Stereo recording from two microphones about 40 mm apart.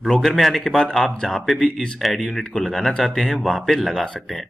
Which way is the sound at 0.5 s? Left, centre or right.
Centre.